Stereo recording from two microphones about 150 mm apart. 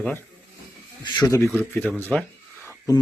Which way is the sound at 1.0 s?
25° left (ahead or behind).